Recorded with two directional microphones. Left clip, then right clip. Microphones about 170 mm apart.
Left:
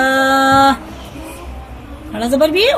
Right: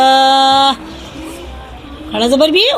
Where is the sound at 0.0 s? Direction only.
30° right (ahead or behind).